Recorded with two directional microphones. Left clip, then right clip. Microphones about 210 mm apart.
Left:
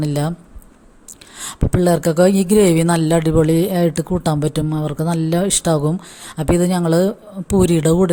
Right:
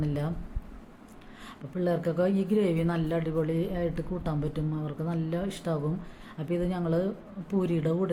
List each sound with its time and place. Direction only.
0.0 s speech: 45° left (ahead or behind)
1.4 s speech: 50° left (ahead or behind)